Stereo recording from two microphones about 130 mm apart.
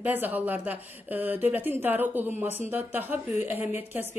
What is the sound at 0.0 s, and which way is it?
Speech, 15° right (ahead or behind).